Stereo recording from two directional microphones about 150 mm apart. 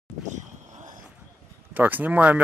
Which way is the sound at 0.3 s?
55° right (ahead or behind).